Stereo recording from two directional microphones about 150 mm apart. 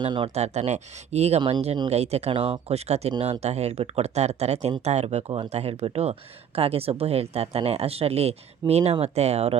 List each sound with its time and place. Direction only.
0.0 s speech: 35° right (ahead or behind)
1.4 s speech: 30° right (ahead or behind)
1.6 s speech: 40° right (ahead or behind)